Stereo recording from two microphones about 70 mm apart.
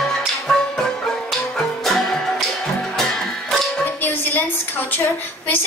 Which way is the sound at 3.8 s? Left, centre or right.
Left.